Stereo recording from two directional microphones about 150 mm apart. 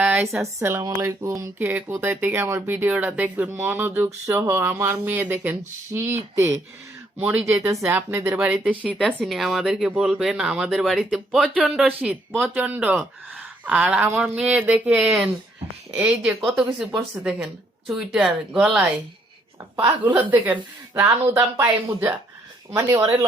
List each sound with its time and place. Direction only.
0.0 s a sound: 5° right (ahead or behind)
0.3 s speech: 15° right (ahead or behind)
19.7 s speech: 15° right (ahead or behind)